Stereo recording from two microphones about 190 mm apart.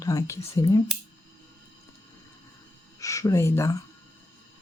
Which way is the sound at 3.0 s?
15° left (ahead or behind).